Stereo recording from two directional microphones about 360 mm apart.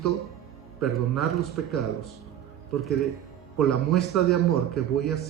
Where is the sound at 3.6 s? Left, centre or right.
Left.